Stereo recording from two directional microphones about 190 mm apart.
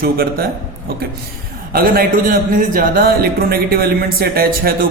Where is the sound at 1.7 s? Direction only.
50° right (ahead or behind).